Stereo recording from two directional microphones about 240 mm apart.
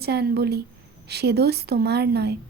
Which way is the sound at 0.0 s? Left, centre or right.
Right.